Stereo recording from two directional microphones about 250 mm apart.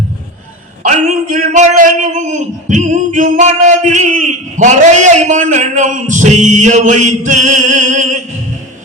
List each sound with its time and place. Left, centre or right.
0.9 s a man's voice: right